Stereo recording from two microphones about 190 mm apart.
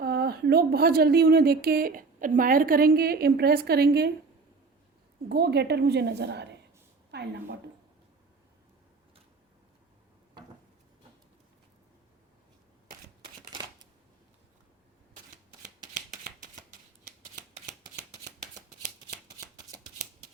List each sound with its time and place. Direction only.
0.0 s speech: 55° right (ahead or behind)
5.3 s a woman's voice: 60° right (ahead or behind)
15.8 s a sound: 40° right (ahead or behind)